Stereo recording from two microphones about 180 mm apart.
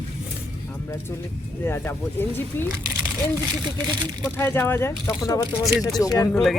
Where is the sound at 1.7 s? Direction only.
10° left (ahead or behind).